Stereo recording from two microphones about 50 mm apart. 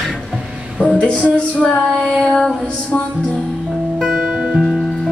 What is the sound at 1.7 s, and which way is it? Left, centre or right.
Child singing, centre.